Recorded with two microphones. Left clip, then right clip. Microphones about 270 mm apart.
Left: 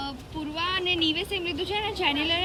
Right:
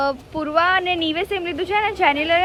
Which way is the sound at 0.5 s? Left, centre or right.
Centre.